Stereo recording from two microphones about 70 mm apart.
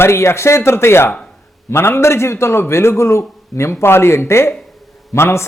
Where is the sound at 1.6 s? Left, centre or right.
Left.